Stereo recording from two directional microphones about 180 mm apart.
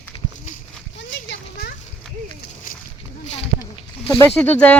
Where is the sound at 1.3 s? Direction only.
60° left (ahead or behind).